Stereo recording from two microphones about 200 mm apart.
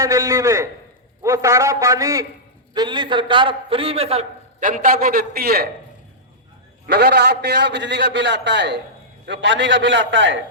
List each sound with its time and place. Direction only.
0.0 s a man's voice: 15° right (ahead or behind); by 5.6 s 50° right (ahead or behind)
6.8 s a man's voice: 55° right (ahead or behind)